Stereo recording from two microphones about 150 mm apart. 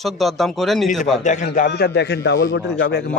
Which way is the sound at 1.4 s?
85° left.